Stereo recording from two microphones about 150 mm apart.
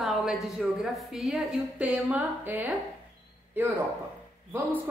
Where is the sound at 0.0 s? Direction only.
5° right (ahead or behind).